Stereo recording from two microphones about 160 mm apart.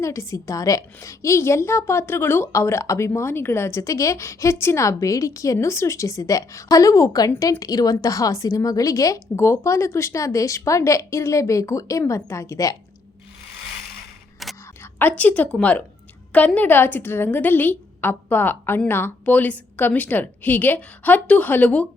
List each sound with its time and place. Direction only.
0.0 s a woman's voice: 20° left (ahead or behind)
14.4 s a sound: centre (ahead or behind)
14.9 s a woman's voice: 10° left (ahead or behind)